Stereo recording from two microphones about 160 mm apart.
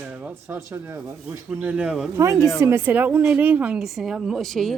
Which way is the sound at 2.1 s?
20° right (ahead or behind).